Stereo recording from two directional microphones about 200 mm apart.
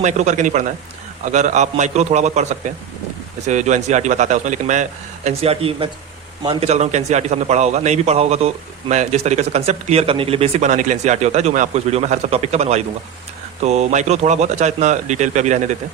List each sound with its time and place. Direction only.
0.0 s a man's voice: 35° right (ahead or behind)